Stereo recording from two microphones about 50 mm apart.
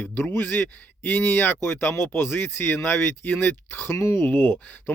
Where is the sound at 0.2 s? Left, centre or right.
Left.